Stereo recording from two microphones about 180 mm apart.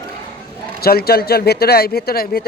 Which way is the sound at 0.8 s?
60° left (ahead or behind).